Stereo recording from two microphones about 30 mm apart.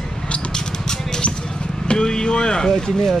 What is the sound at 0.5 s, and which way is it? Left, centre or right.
Music, left.